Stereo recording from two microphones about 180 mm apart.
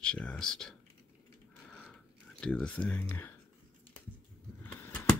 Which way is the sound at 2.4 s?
5° left (ahead or behind).